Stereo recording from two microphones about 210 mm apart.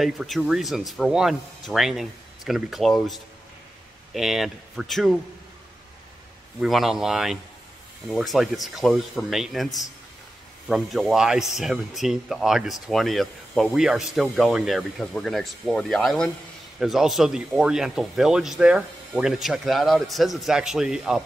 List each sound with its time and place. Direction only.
0.0 s speech: centre (ahead or behind)
6.6 s speech: centre (ahead or behind)